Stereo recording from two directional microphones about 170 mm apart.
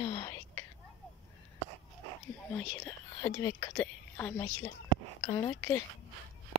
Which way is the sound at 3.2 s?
20° left (ahead or behind).